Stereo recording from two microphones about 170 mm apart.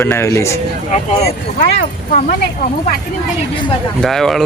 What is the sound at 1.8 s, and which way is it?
Speech, 50° left (ahead or behind).